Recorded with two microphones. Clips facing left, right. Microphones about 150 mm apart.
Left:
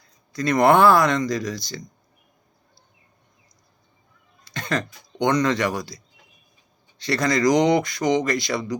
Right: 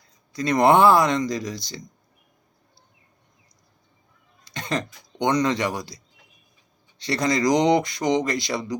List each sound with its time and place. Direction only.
0.3 s speech: 20° right (ahead or behind)
4.5 s cough: 20° right (ahead or behind)
5.2 s speech: 15° right (ahead or behind)
7.1 s speech: 20° right (ahead or behind)